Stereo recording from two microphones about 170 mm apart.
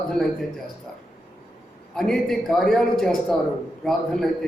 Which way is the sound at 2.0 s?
Centre (ahead or behind).